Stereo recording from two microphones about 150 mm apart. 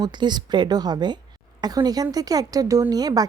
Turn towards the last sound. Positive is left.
turn(degrees=-25)  # may be behind; listen again after turning